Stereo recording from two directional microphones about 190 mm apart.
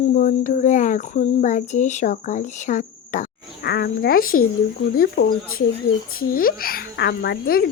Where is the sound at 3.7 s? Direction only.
60° left (ahead or behind).